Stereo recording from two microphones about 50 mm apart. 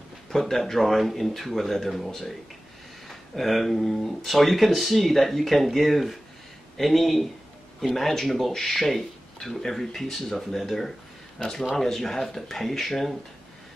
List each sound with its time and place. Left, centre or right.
0.3 s speech: centre